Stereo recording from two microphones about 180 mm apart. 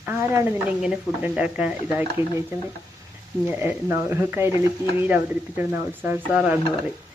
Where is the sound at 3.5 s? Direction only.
10° right (ahead or behind).